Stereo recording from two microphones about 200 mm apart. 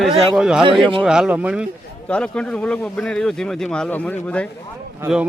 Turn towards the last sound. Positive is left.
turn(degrees=-5)  # may be behind; listen again after turning